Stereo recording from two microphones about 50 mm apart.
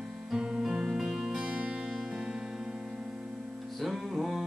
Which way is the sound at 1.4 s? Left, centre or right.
Centre.